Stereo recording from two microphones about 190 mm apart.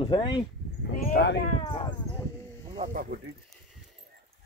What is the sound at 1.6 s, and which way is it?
Speech, 25° left (ahead or behind).